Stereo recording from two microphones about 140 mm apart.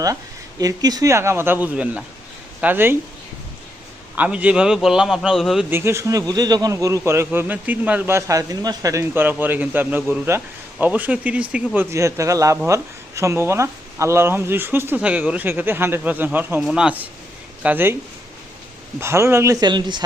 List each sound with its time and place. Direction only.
0.6 s a man's voice: 25° right (ahead or behind)
4.1 s a man's voice: 10° right (ahead or behind)
5.7 s a man's voice: 20° right (ahead or behind)
18.9 s speech: 20° right (ahead or behind)